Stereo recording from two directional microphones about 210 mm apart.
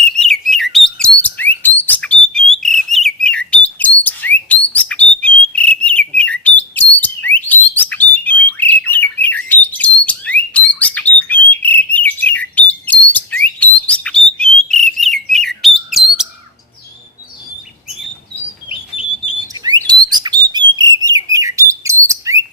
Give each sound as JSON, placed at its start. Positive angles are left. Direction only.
{"t": 0.0, "sound": "bird", "side_deg": 0}
{"t": 18.7, "sound": "squawk", "side_deg": 25}
{"t": 19.9, "sound": "bird", "side_deg": -20}